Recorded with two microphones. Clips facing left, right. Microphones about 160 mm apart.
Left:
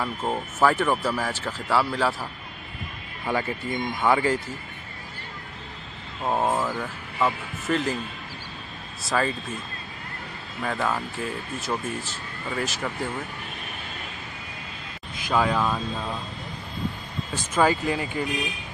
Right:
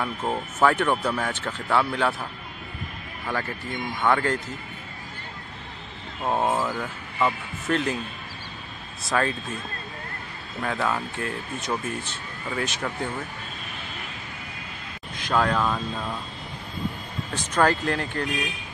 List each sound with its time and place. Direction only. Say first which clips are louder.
0.0 s speech: even; centre (ahead or behind)
3.3 s speech: left 3 dB; 15° left (ahead or behind)
6.2 s speech: even; centre (ahead or behind)
9.0 s speech: even; centre (ahead or behind)
10.6 s speech: even; centre (ahead or behind)
15.1 s speech: even; 5° left (ahead or behind)
17.3 s speech: even; 5° left (ahead or behind)